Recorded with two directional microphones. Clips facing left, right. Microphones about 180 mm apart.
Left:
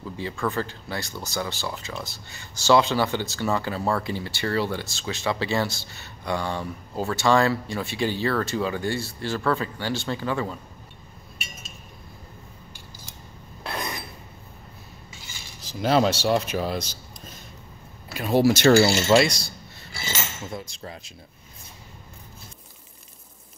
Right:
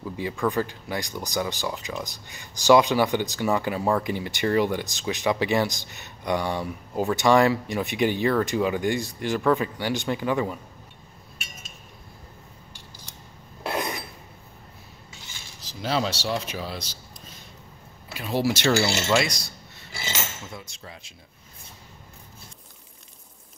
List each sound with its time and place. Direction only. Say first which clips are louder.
0.0 s speech: right 2 dB; 15° right (ahead or behind)
15.6 s speech: left 6 dB; 50° left (ahead or behind)
18.1 s speech: left 5 dB; 45° left (ahead or behind)
18.9 s speech: left 5 dB; 35° left (ahead or behind)
20.5 s a sound: left 5 dB; 40° left (ahead or behind)